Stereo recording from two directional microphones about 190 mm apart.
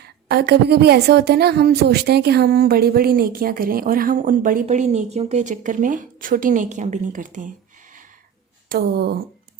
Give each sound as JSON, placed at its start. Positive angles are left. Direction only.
{"t": 0.0, "sound": "a woman's voice", "side_deg": -55}
{"t": 8.7, "sound": "speech", "side_deg": -55}